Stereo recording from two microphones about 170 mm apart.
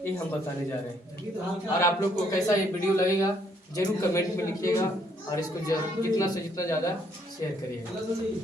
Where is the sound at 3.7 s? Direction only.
20° left (ahead or behind).